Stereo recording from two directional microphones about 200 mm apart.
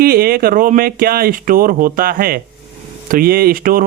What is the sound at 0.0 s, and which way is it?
Speech, 50° right (ahead or behind).